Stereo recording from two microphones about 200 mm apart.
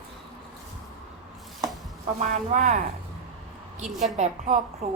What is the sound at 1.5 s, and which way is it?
Chopping, centre (ahead or behind).